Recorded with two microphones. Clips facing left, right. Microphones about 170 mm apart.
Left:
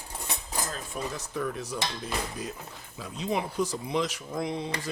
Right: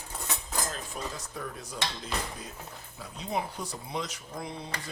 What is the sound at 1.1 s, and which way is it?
Speech, 75° left (ahead or behind).